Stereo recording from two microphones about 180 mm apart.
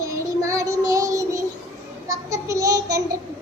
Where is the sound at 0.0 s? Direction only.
15° right (ahead or behind).